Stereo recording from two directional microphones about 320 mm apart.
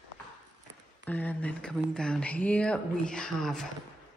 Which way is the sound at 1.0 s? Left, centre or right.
Centre.